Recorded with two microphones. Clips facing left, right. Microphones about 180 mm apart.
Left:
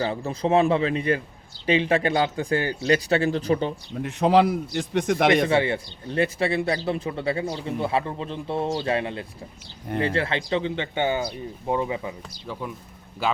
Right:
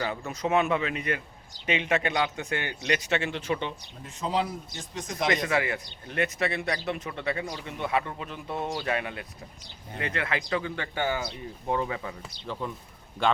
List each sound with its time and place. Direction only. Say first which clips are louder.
0.0 s a man's voice: left 5 dB; 30° left (ahead or behind)
4.0 s a man's voice: left 10 dB; 70° left (ahead or behind)
5.3 s speech: left 7 dB; 30° left (ahead or behind)
13.2 s a man's voice: even; 5° left (ahead or behind)